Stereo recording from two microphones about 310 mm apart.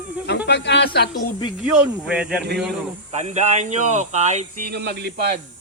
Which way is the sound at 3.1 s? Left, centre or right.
Right.